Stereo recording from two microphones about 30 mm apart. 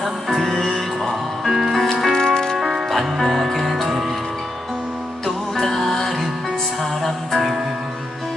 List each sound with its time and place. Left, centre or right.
0.0 s music: centre
1.5 s music: centre
1.7 s music: centre
2.1 s music: left
2.6 s music: centre
2.9 s music: centre
5.7 s music: centre